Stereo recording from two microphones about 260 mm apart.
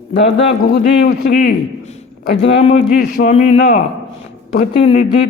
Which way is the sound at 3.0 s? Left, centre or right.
Left.